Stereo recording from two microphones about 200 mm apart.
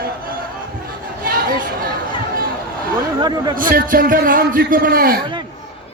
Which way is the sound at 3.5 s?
45° right (ahead or behind).